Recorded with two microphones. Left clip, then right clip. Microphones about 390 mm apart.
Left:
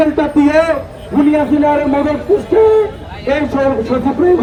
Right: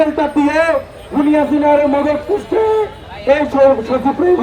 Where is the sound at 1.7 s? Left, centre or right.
Centre.